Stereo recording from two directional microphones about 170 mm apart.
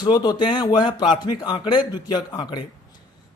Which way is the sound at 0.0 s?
25° left (ahead or behind).